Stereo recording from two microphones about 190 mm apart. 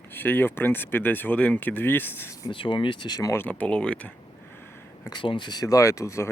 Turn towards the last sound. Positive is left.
turn(degrees=15)  # may be behind; listen again after turning